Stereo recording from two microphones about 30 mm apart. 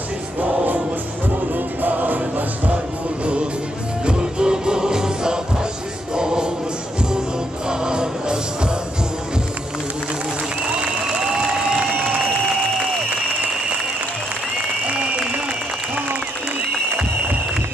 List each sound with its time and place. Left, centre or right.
0.3 s music: right
4.0 s music: right
7.7 s music: right
11.3 s crowd: right
11.9 s a sound: right
14.8 s a sound: right